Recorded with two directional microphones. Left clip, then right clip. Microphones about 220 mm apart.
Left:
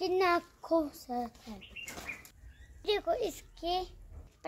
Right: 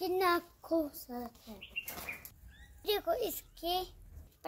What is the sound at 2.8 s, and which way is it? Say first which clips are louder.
A child's voice: left 2 dB; 10° left (ahead or behind).